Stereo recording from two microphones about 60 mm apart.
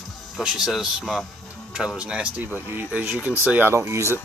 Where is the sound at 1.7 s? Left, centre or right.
Centre.